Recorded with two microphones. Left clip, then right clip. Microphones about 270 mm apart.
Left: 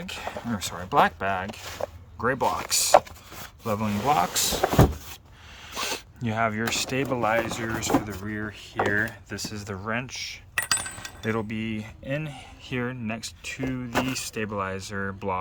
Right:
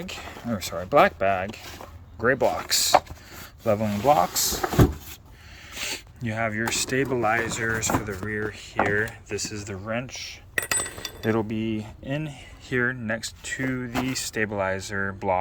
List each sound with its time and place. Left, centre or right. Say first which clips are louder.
0.0 s speech: left 2 dB; centre
5.7 s speech: left 2 dB; centre